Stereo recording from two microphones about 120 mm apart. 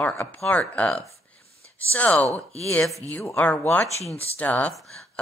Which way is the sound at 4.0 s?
60° left (ahead or behind).